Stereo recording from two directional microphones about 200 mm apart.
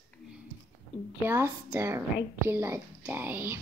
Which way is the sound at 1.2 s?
10° right (ahead or behind).